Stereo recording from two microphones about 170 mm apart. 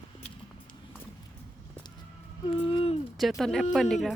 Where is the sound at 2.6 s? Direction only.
35° left (ahead or behind).